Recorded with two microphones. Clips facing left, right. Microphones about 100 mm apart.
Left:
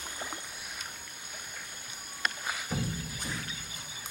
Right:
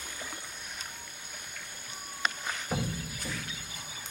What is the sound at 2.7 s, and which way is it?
Music, 45° right (ahead or behind).